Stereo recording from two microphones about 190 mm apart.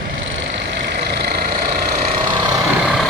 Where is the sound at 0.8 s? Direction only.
55° right (ahead or behind).